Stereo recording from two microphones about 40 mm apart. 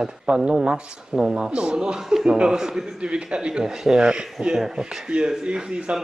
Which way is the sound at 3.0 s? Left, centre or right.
Right.